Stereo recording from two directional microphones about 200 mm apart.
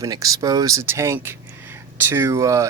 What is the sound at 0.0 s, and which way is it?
Speech, 15° right (ahead or behind).